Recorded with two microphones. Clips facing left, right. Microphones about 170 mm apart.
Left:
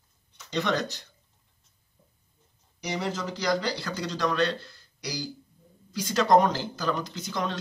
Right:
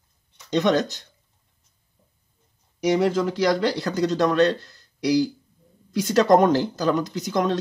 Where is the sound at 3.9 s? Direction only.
45° right (ahead or behind).